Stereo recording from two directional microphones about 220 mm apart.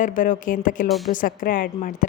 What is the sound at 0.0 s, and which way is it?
Speech, 35° left (ahead or behind).